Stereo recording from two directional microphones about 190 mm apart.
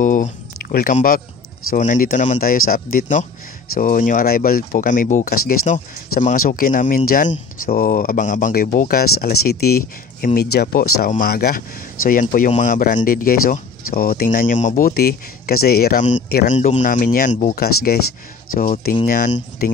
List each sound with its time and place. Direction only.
0.0 s speech: 40° left (ahead or behind)
16.2 s speech: 55° left (ahead or behind)
16.4 s speech: 40° left (ahead or behind)
17.6 s speech: 55° left (ahead or behind)